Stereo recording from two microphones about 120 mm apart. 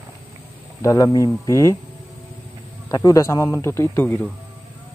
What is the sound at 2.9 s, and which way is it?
Speech, 30° left (ahead or behind).